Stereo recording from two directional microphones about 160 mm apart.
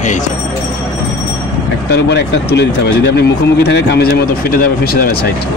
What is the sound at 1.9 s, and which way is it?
Speech, 90° left.